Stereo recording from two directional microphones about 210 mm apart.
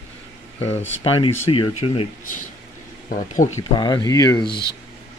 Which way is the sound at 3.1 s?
40° left (ahead or behind).